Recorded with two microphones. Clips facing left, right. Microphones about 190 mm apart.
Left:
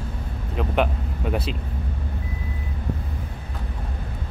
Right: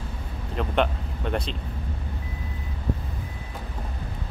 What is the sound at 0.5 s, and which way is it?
Speech, 5° left (ahead or behind).